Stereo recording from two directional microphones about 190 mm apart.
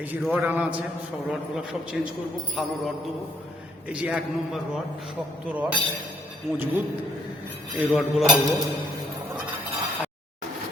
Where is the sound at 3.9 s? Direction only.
5° right (ahead or behind).